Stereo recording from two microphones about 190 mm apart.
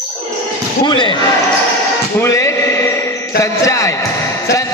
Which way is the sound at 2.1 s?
15° left (ahead or behind).